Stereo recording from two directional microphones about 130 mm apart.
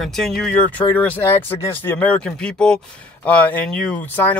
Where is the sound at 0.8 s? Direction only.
15° left (ahead or behind).